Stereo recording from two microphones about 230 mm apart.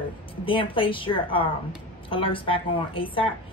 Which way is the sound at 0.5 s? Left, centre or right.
Left.